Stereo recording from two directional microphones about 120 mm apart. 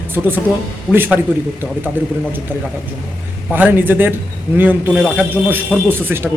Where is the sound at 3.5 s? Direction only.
15° right (ahead or behind).